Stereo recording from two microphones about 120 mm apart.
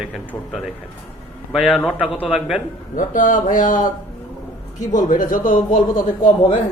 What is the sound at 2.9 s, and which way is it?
Speech, 90° left.